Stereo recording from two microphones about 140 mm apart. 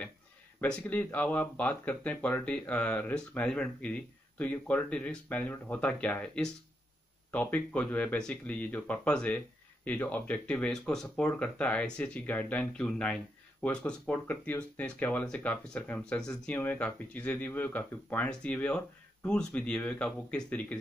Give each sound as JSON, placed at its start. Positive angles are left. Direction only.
{"t": 0.6, "sound": "speech", "side_deg": 10}